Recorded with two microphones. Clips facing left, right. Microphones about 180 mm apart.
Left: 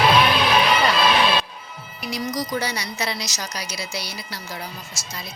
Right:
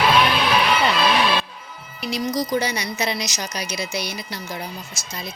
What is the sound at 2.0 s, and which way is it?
A woman's voice, 25° right (ahead or behind).